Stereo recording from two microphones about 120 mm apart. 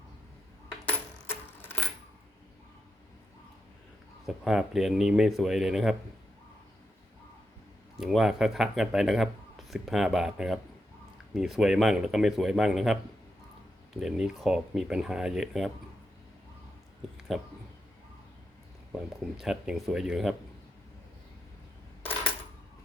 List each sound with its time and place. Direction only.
0.9 s coin: 20° left (ahead or behind)
4.3 s a man's voice: 5° right (ahead or behind)
7.9 s a man's voice: centre (ahead or behind)
17.3 s a man's voice: centre (ahead or behind)
19.4 s a man's voice: 5° right (ahead or behind)